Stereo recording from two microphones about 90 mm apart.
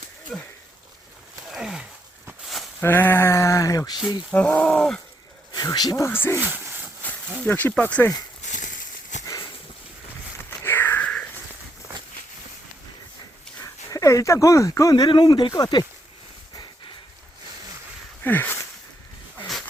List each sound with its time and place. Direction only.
0.3 s speech: 5° left (ahead or behind)
1.5 s a sound: 5° right (ahead or behind)
2.8 s sheep: 25° left (ahead or behind); by 3.9 s 40° left (ahead or behind)
4.3 s speech: 20° left (ahead or behind)
5.7 s speech: 50° left (ahead or behind)
6.0 s speech: 25° left (ahead or behind)
6.4 s a sound: 20° right (ahead or behind)
7.0 s speech: 20° left (ahead or behind)
10.6 s a sound: 25° left (ahead or behind)
13.6 s speech: 40° left (ahead or behind)
15.1 s speech: 55° left (ahead or behind)
18.2 s a sound: 20° left (ahead or behind)